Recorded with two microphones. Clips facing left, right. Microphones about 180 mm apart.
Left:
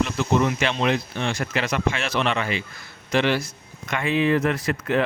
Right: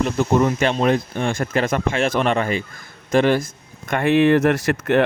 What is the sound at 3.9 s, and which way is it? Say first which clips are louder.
Speech: right 6 dB; 60° right (ahead or behind).